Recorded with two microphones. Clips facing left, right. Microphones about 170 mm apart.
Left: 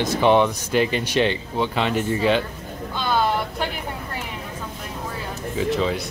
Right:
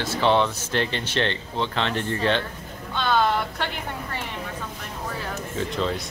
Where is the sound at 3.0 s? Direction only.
10° left (ahead or behind).